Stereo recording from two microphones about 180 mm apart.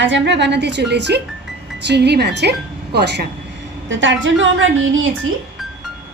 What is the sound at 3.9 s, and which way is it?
Speech, 90° right.